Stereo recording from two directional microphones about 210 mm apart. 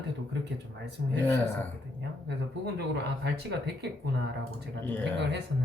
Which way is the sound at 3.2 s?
50° right (ahead or behind).